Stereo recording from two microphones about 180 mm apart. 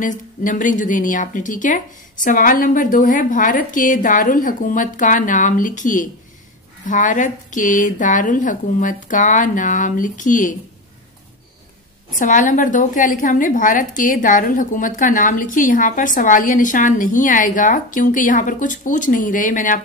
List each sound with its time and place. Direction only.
0.0 s a woman's voice: 45° left (ahead or behind)
12.1 s a woman's voice: 45° left (ahead or behind)